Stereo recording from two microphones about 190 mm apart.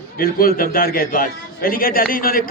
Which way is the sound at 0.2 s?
50° left (ahead or behind).